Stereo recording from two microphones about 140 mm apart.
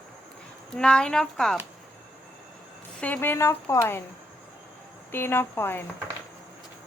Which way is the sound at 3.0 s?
15° left (ahead or behind).